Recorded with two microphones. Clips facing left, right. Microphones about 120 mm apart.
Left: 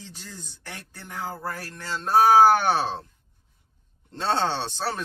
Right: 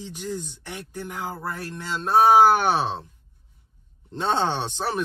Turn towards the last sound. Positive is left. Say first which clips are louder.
# right 2 dB
turn(degrees=-15)  # may be behind; listen again after turning